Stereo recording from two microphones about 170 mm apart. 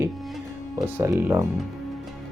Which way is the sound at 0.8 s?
20° right (ahead or behind).